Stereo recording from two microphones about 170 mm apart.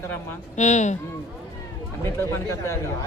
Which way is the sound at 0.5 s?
45° left (ahead or behind).